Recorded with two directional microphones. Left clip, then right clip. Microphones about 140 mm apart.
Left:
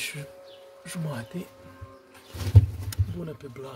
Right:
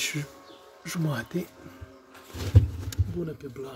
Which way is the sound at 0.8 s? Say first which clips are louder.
Right 4 dB; 40° right (ahead or behind).